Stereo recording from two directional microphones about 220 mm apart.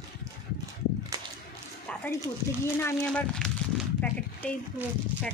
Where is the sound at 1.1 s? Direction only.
15° right (ahead or behind).